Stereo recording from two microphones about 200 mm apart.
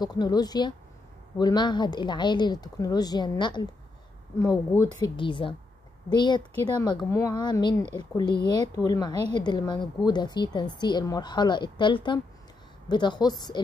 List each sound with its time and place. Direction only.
0.0 s a woman's voice: 20° left (ahead or behind)
4.8 s a woman's voice: 20° left (ahead or behind)